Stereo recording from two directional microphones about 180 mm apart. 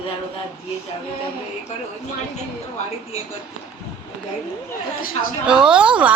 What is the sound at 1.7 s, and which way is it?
Speech, 40° left (ahead or behind).